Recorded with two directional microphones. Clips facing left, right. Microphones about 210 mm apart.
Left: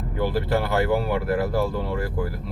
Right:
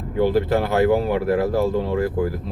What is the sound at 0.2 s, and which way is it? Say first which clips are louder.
Speech: right 5 dB; 20° right (ahead or behind).